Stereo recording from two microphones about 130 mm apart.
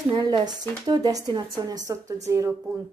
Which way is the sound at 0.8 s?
30° right (ahead or behind).